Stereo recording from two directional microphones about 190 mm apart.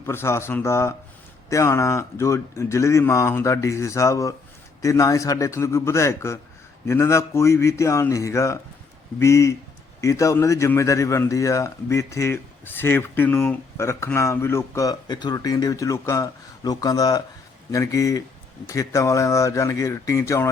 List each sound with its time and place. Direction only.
0.0 s a man's voice: 15° left (ahead or behind)